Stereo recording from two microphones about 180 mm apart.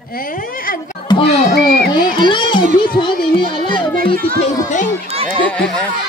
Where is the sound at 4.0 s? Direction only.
55° right (ahead or behind).